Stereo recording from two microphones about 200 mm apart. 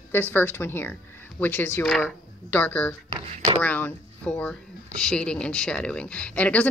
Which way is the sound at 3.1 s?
30° right (ahead or behind).